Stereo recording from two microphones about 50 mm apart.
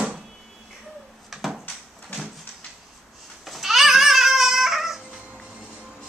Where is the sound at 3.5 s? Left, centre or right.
Centre.